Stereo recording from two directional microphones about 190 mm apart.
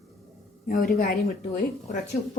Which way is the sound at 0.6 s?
50° left (ahead or behind).